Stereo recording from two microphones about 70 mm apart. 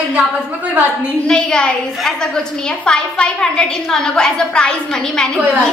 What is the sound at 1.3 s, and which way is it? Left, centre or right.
A woman's voice, centre.